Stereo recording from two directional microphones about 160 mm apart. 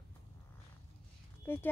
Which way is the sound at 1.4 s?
15° left (ahead or behind).